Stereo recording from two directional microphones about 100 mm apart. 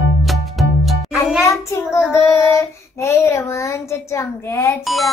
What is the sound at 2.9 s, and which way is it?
A child's voice, 30° left (ahead or behind).